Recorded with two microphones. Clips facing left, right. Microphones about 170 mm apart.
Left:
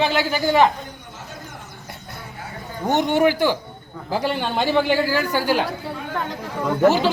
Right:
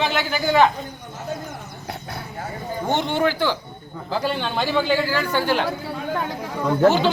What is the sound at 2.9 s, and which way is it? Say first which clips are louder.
Speech: left 4 dB; 40° left (ahead or behind).